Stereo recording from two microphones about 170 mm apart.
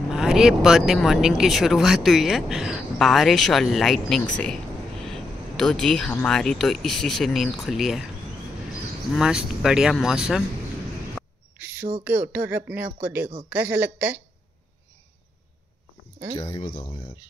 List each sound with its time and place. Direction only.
0.1 s speech: 5° right (ahead or behind)
9.1 s speech: 5° right (ahead or behind)
11.5 s a sound: 10° right (ahead or behind)
12.0 s speech: 10° right (ahead or behind)
16.5 s speech: 30° left (ahead or behind)